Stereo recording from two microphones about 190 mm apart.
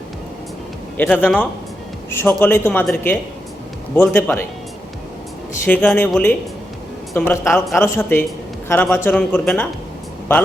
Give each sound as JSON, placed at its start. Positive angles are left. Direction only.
{"t": 0.9, "sound": "speech", "side_deg": 10}
{"t": 5.6, "sound": "a woman's voice", "side_deg": 5}
{"t": 7.8, "sound": "speech", "side_deg": 10}